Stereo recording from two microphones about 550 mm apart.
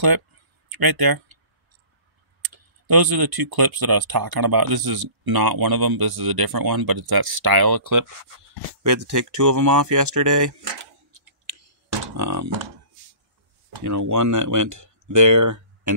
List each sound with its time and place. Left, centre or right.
0.7 s speech: right
2.4 s speech: right
11.4 s a sound: right
12.2 s speech: right
13.8 s speech: right